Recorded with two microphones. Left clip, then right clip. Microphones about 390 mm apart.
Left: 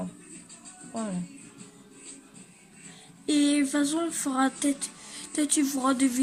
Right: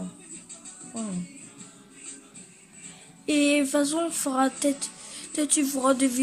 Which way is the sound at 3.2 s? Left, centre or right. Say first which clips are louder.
Right 2 dB; centre.